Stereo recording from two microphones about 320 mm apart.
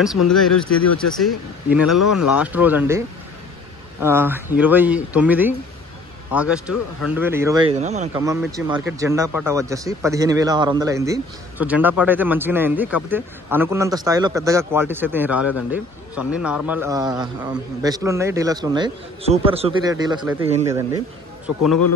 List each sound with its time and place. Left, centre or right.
0.3 s speech: centre
0.7 s speech: left
1.0 s speech: centre
1.9 s speech: left
2.3 s speech: centre
4.0 s a man's voice: centre
8.2 s a man's voice: centre